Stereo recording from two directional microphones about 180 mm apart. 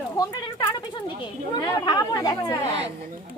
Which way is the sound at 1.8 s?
20° left (ahead or behind).